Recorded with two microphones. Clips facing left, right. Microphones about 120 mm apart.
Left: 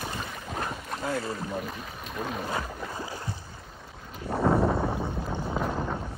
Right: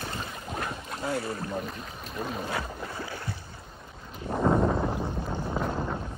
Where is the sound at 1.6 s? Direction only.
Centre (ahead or behind).